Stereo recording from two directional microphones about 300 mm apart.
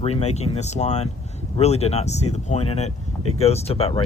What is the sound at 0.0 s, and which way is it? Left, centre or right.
Speech, left.